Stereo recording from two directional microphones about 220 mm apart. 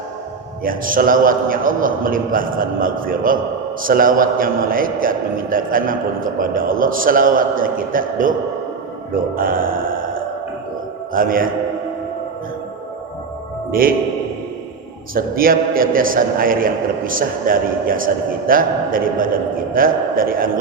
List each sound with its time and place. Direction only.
0.6 s a man's voice: 40° right (ahead or behind)
9.3 s a sound: 40° right (ahead or behind)
11.1 s a man's voice: 40° right (ahead or behind)
13.7 s a man's voice: 40° right (ahead or behind)
15.1 s a man's voice: 40° right (ahead or behind)